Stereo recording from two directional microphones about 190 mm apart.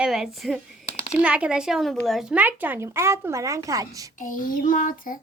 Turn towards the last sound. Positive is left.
turn(degrees=45)  # may be behind; listen again after turning